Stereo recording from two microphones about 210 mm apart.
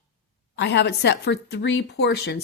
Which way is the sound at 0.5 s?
55° left (ahead or behind).